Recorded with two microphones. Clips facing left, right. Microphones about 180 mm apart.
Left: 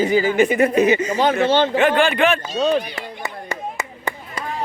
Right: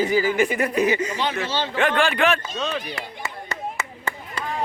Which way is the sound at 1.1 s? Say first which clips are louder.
Left 9 dB; 50° left (ahead or behind).